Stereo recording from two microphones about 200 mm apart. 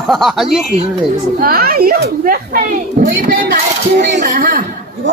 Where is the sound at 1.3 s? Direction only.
45° right (ahead or behind).